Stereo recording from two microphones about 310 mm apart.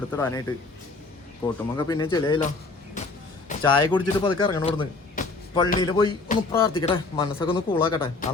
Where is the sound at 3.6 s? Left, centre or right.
Centre.